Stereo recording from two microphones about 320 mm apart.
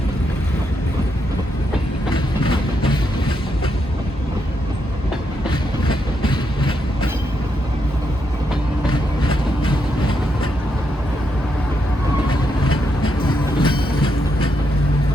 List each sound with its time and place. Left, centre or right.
2.1 s train: centre
5.5 s train: centre
8.9 s vehicle: centre
12.3 s vehicle: centre